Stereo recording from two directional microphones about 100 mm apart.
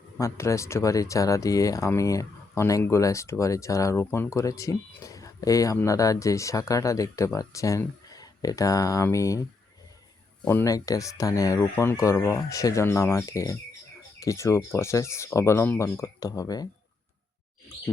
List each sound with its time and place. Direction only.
0.2 s speech: 30° left (ahead or behind)
10.5 s speech: 30° left (ahead or behind)